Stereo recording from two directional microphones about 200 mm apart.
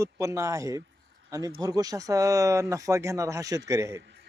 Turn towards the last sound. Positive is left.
turn(degrees=-15)  # may be behind; listen again after turning